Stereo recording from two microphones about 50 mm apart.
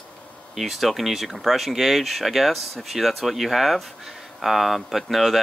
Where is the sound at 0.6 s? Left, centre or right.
Centre.